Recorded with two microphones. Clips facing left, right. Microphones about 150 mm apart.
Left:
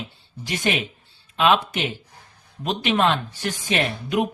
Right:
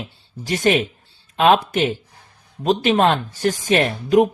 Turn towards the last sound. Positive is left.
turn(degrees=-45)  # may be behind; listen again after turning